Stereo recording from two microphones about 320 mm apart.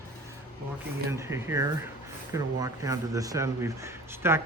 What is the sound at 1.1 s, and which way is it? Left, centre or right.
Speech, centre.